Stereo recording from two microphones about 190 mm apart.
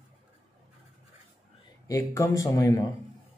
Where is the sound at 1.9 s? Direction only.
15° left (ahead or behind).